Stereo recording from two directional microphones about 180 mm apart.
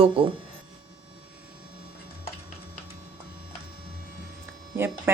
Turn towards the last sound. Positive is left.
turn(degrees=-15)  # may be behind; listen again after turning